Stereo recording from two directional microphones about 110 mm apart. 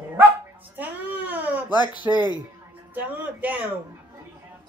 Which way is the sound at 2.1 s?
30° right (ahead or behind).